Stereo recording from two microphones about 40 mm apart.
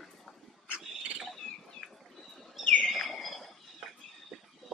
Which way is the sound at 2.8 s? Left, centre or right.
Centre.